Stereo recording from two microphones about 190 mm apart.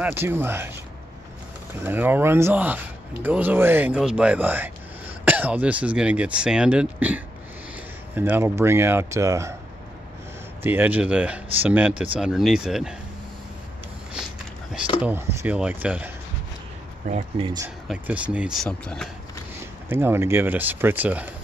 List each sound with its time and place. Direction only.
0.0 s speech: 10° right (ahead or behind)
1.8 s speech: 10° right (ahead or behind)
10.6 s speech: 10° right (ahead or behind)
15.0 s speech: 10° right (ahead or behind)
17.1 s speech: 30° right (ahead or behind)
17.8 s speech: 5° right (ahead or behind)
19.9 s speech: 10° right (ahead or behind)